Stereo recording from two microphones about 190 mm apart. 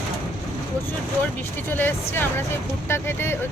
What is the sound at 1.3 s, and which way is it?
Speech, 10° left (ahead or behind).